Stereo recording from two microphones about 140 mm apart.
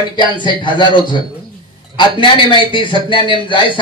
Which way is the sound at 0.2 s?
35° left (ahead or behind).